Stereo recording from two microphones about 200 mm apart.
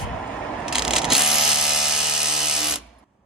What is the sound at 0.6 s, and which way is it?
Ratchet, centre (ahead or behind).